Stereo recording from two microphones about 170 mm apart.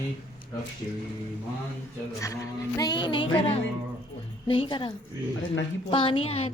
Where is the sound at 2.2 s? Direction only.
20° left (ahead or behind).